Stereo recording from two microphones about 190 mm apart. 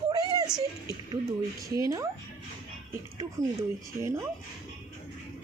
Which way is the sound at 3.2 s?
15° right (ahead or behind).